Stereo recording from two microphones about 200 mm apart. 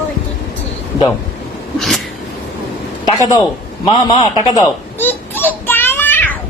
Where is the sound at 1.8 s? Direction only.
Centre (ahead or behind).